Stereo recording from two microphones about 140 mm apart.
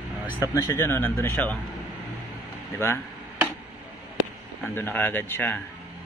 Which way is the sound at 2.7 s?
15° left (ahead or behind).